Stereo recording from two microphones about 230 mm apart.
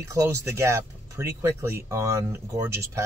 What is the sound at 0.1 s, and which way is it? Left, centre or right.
Speech, centre.